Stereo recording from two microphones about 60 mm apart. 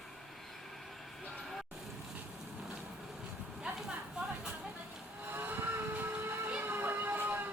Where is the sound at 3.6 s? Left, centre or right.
Centre.